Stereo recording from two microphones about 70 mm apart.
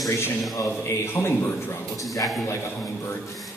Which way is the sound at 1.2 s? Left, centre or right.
Left.